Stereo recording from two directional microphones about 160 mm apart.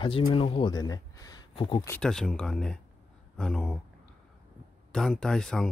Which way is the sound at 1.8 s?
5° left (ahead or behind).